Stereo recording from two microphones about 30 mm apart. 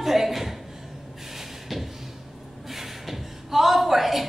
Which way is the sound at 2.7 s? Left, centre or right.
Centre.